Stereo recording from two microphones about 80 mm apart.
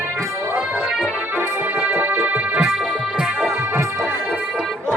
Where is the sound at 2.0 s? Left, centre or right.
Right.